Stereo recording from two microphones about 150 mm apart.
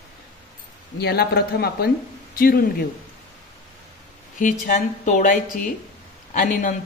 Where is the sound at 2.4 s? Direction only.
75° left (ahead or behind).